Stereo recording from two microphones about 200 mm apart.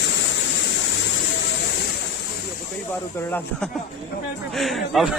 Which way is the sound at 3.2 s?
10° left (ahead or behind).